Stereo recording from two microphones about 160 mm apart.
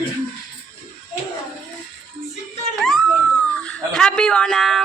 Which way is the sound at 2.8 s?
Centre (ahead or behind).